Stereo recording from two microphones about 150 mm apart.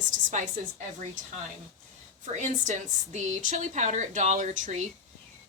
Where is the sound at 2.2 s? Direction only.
55° right (ahead or behind).